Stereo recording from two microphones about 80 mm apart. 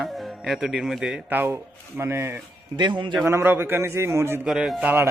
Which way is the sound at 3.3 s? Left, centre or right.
Right.